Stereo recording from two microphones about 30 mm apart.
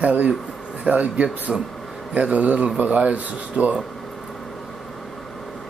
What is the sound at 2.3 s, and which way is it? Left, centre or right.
Speech, right.